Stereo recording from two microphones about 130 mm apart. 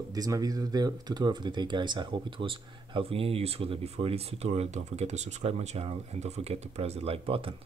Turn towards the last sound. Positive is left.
turn(degrees=-45)  # may be behind; listen again after turning